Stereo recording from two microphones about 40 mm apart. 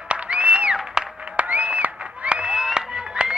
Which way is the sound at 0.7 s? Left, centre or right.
Centre.